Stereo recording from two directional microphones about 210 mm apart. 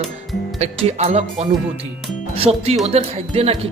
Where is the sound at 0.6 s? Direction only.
30° right (ahead or behind).